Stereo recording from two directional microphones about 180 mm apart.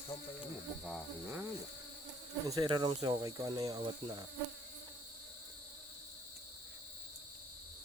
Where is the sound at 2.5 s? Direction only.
20° right (ahead or behind).